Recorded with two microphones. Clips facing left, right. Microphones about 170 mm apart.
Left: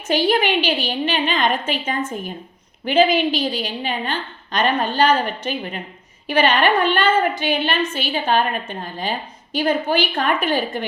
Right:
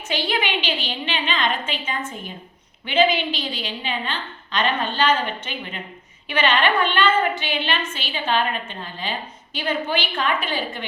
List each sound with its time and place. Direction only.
0.1 s a woman's voice: 45° left (ahead or behind)